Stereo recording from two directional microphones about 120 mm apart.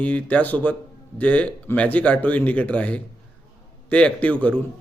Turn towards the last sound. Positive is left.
turn(degrees=10)  # may be behind; listen again after turning